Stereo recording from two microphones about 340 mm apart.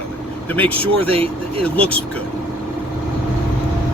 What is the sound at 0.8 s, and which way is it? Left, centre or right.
Speech, centre.